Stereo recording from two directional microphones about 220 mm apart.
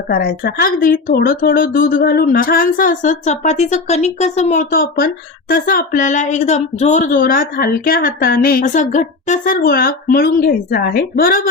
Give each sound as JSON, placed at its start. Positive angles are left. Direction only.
{"t": 0.1, "sound": "speech", "side_deg": 45}